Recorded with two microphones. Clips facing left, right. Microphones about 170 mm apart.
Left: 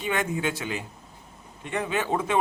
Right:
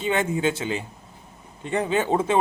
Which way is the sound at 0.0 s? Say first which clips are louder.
Right 4 dB; 25° right (ahead or behind).